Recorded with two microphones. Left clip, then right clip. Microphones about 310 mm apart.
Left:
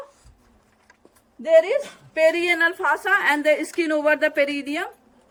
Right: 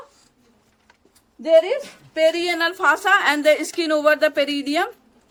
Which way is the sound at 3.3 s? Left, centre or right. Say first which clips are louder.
Right 2 dB; centre.